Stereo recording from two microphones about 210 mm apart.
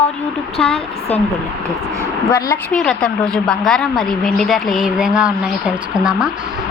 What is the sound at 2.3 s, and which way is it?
Speech, 40° left (ahead or behind).